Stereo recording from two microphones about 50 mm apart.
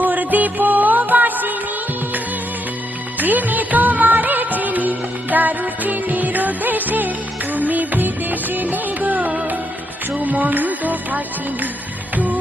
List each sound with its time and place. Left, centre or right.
0.0 s music: right
3.2 s music: right